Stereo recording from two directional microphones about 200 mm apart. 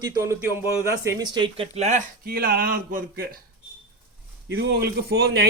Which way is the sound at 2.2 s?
50° right (ahead or behind).